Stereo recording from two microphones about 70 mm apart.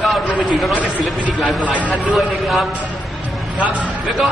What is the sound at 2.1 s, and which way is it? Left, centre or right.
Speech, centre.